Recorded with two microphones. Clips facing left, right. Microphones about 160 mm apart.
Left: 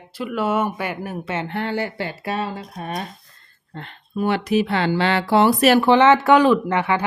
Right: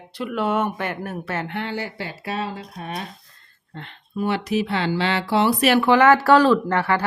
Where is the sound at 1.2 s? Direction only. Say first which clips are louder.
Left 2 dB; 20° left (ahead or behind).